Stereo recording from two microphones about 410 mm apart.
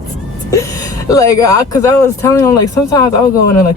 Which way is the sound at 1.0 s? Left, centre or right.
Centre.